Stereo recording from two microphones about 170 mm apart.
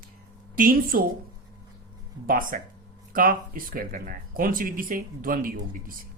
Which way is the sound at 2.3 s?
55° right (ahead or behind).